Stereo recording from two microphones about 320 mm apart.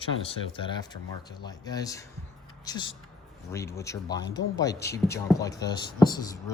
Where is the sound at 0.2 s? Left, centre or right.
Centre.